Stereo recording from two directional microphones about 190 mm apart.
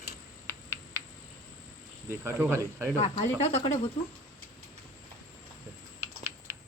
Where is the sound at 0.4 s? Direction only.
15° right (ahead or behind).